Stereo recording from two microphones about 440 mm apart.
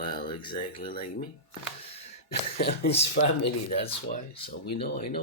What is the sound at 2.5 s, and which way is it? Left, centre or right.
Speech, left.